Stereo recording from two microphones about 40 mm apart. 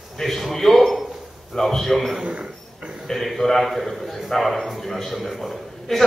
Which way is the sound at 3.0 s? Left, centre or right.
Centre.